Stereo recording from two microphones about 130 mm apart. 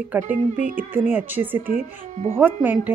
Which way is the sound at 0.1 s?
15° right (ahead or behind).